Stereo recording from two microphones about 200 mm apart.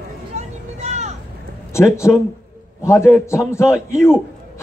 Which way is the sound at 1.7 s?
15° left (ahead or behind).